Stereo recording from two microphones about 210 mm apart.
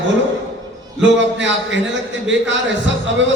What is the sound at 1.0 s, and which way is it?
A man's voice, 60° right (ahead or behind).